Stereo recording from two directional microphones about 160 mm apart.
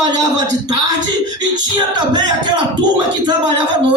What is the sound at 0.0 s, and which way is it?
Speech, 25° right (ahead or behind).